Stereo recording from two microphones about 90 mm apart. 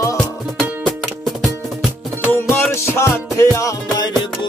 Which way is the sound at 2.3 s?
25° left (ahead or behind).